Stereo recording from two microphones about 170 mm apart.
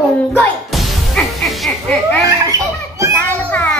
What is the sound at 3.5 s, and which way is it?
Speech, 10° left (ahead or behind).